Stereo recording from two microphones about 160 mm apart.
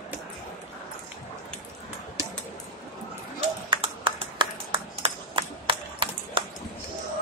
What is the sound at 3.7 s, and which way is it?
Clapping, 30° right (ahead or behind).